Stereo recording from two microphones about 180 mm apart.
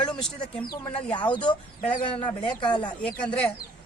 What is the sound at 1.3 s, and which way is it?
Speech, 25° left (ahead or behind).